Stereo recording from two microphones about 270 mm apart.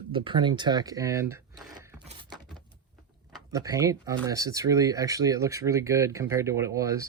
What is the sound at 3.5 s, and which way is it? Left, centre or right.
Speech, centre.